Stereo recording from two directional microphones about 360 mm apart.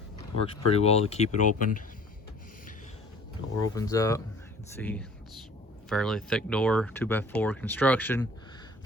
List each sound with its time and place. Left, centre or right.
0.7 s speech: centre
3.6 s speech: centre